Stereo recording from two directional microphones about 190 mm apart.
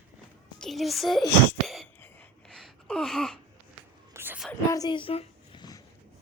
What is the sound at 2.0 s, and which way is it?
Gasp, centre (ahead or behind).